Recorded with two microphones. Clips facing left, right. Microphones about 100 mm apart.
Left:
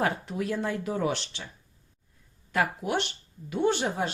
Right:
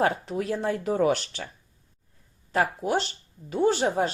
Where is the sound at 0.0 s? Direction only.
35° right (ahead or behind).